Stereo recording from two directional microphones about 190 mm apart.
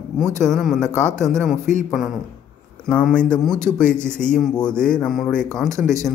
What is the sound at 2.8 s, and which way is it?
Speech, 5° left (ahead or behind).